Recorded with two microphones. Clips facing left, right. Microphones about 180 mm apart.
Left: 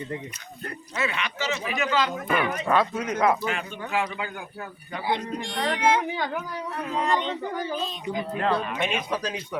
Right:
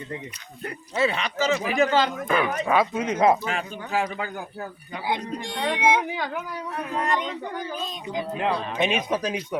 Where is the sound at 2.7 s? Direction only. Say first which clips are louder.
Right 2 dB; 20° right (ahead or behind).